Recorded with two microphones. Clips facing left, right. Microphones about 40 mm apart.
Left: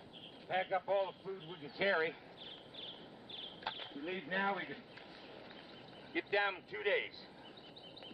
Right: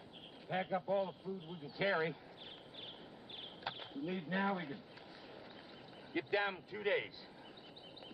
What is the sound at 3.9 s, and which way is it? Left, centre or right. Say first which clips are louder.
A man's voice: even; left.